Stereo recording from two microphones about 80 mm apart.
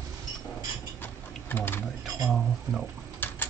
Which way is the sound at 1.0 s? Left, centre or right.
Left.